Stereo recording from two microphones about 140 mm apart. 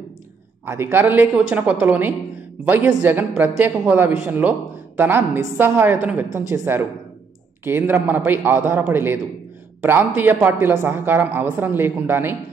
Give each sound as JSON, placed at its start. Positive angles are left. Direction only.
{"t": 0.7, "sound": "a woman's voice", "side_deg": -15}